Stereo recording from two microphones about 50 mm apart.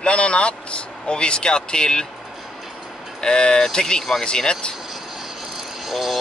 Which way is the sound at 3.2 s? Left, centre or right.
Centre.